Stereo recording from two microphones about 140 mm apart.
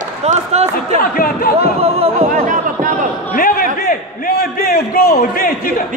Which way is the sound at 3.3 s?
90° left.